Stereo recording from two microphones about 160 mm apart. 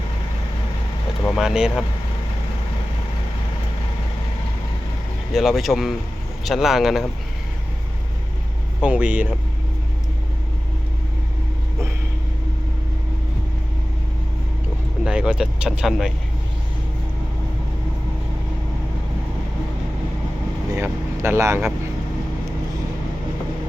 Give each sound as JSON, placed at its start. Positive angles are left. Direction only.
{"t": 1.4, "sound": "speech", "side_deg": -5}
{"t": 5.3, "sound": "speech", "side_deg": 0}
{"t": 8.8, "sound": "speech", "side_deg": -10}
{"t": 15.0, "sound": "speech", "side_deg": -5}
{"t": 20.7, "sound": "speech", "side_deg": -15}